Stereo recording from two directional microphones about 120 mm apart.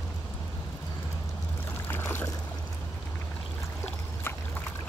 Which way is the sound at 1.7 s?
20° left (ahead or behind).